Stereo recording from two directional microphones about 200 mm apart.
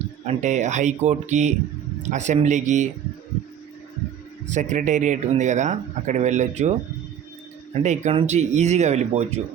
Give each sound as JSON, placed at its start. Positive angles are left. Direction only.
{"t": 0.3, "sound": "speech", "side_deg": -35}
{"t": 4.5, "sound": "speech", "side_deg": -40}
{"t": 7.8, "sound": "speech", "side_deg": -35}